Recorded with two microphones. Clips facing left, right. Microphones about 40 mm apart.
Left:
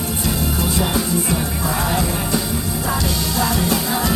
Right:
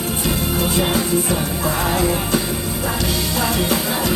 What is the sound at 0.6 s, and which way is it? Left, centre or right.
Music, right.